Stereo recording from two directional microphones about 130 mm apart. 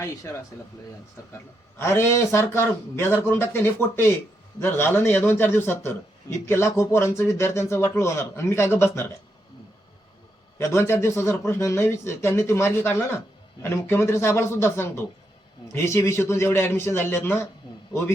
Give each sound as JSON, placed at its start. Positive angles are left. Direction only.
{"t": 0.0, "sound": "speech", "side_deg": 25}
{"t": 1.8, "sound": "a man's voice", "side_deg": 20}
{"t": 10.6, "sound": "speech", "side_deg": 20}